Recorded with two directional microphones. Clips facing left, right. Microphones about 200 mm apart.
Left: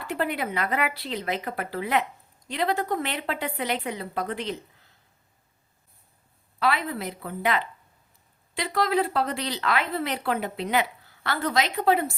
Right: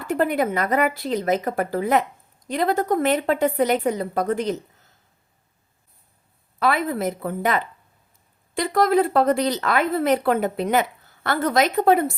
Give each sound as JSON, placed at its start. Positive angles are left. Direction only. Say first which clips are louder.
{"t": 0.0, "sound": "speech", "louder": "right 7 dB", "side_deg": -45}
{"t": 6.6, "sound": "speech", "louder": "right 5 dB", "side_deg": -50}